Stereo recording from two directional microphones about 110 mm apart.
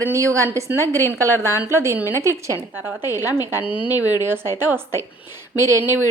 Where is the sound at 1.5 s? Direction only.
25° right (ahead or behind).